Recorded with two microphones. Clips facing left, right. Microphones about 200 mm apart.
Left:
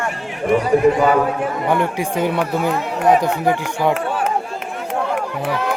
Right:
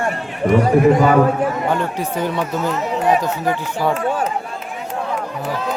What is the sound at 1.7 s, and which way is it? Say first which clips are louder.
Speech: left 2 dB; 15° left (ahead or behind).